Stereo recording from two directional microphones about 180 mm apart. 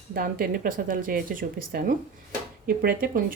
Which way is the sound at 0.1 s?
55° right (ahead or behind).